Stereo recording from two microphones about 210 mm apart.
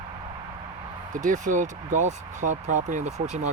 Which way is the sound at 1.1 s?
40° right (ahead or behind).